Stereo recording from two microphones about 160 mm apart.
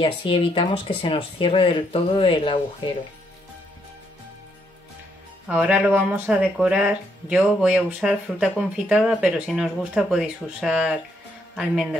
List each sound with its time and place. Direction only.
0.0 s speech: 35° left (ahead or behind)
5.5 s speech: 5° right (ahead or behind)